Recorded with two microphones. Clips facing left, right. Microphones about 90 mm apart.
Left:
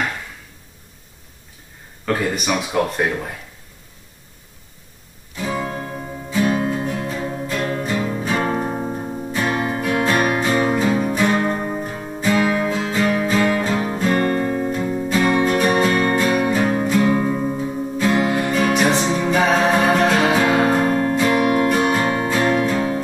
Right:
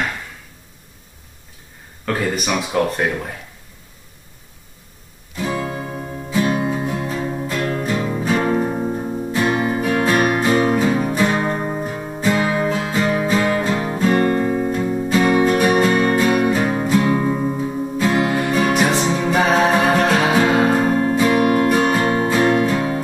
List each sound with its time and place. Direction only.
2.0 s speech: centre (ahead or behind)
5.3 s music: centre (ahead or behind)
14.1 s music: 15° right (ahead or behind)
14.5 s music: centre (ahead or behind)